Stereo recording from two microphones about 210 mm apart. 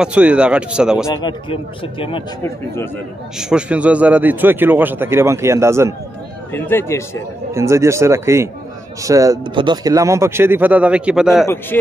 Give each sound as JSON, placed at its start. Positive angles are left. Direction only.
{"t": 0.0, "sound": "speech", "side_deg": -5}
{"t": 1.0, "sound": "speech", "side_deg": 20}
{"t": 2.4, "sound": "speech", "side_deg": 10}
{"t": 3.3, "sound": "a man's voice", "side_deg": -5}
{"t": 6.5, "sound": "speech", "side_deg": 10}
{"t": 7.5, "sound": "a man's voice", "side_deg": -15}
{"t": 11.4, "sound": "speech", "side_deg": 10}